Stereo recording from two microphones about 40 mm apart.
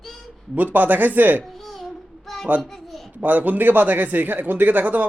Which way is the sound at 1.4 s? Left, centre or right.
Centre.